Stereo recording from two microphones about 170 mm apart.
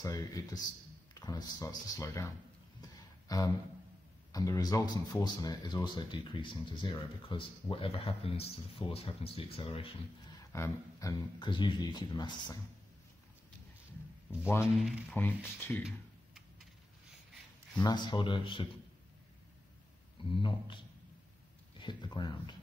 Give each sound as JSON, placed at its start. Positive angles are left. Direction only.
{"t": 0.0, "sound": "speech", "side_deg": 20}
{"t": 2.8, "sound": "a sound", "side_deg": 20}
{"t": 4.3, "sound": "speech", "side_deg": 20}
{"t": 10.5, "sound": "speech", "side_deg": 15}
{"t": 14.8, "sound": "speech", "side_deg": 0}
{"t": 15.1, "sound": "speech", "side_deg": 10}
{"t": 17.8, "sound": "speech", "side_deg": 25}
{"t": 20.2, "sound": "speech", "side_deg": 30}